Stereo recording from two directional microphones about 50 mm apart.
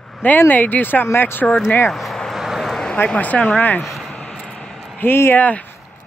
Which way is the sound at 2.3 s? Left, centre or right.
Centre.